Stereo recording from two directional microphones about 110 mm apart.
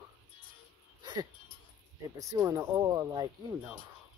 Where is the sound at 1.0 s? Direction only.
40° right (ahead or behind).